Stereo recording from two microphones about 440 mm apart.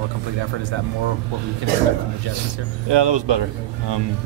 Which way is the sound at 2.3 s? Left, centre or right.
Right.